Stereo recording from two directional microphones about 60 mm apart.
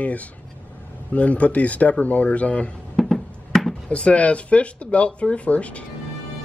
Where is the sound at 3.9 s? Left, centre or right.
Left.